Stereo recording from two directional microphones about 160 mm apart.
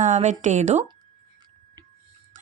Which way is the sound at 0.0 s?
50° right (ahead or behind).